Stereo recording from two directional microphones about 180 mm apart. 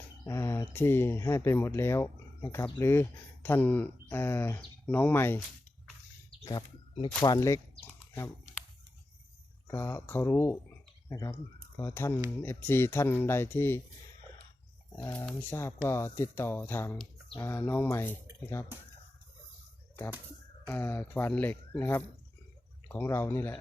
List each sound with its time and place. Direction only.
0.3 s speech: 15° left (ahead or behind)
6.4 s speech: 20° left (ahead or behind)
9.6 s speech: 15° left (ahead or behind)
14.9 s speech: 15° left (ahead or behind)
20.7 s speech: 10° left (ahead or behind)